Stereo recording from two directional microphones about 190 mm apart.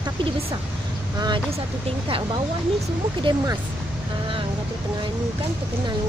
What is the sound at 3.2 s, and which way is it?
Speech, 25° right (ahead or behind).